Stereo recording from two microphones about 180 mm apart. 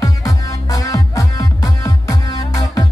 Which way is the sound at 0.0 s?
20° left (ahead or behind).